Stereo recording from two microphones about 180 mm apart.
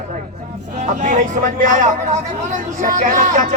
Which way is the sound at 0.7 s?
40° right (ahead or behind).